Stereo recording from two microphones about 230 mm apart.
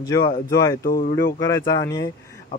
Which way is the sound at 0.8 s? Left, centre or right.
Left.